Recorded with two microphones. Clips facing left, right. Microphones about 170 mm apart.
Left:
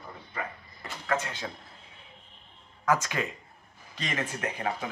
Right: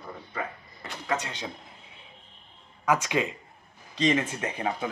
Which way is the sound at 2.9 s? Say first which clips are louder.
Right 2 dB; 20° right (ahead or behind).